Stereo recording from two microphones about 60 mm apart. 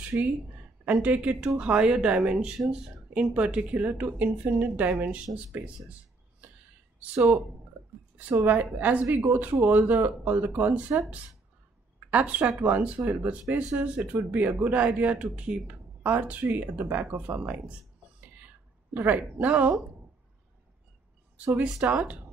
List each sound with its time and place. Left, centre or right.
0.2 s a woman's voice: right
8.5 s a woman's voice: right
18.9 s a woman's voice: right
21.6 s speech: centre